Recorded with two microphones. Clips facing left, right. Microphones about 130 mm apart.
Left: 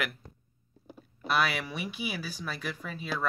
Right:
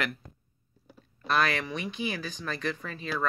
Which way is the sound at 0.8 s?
20° left (ahead or behind).